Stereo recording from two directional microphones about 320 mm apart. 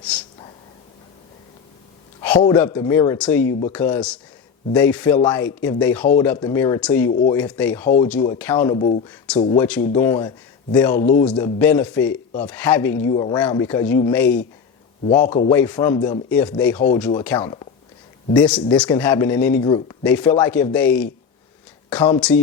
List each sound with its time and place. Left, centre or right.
2.4 s a man's voice: centre
8.7 s speech: left
9.0 s speech: centre
9.4 s a man's voice: centre
15.3 s speech: centre
15.5 s a man's voice: centre